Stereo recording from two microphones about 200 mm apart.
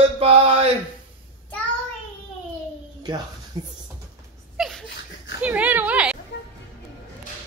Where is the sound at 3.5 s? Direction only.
20° right (ahead or behind).